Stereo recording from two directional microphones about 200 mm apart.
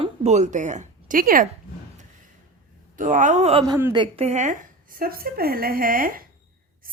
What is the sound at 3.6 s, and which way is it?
A woman's voice, 20° right (ahead or behind).